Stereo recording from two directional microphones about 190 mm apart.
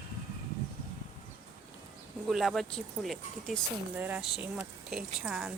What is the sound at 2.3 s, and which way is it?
A woman's voice, centre (ahead or behind).